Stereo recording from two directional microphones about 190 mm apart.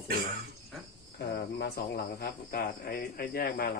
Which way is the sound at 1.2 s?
60° left (ahead or behind).